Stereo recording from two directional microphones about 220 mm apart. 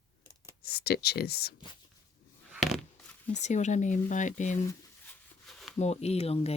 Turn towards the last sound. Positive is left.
turn(degrees=30)  # may be behind; listen again after turning